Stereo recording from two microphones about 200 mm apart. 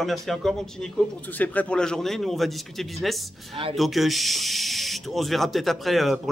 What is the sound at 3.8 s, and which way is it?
Speech, centre (ahead or behind).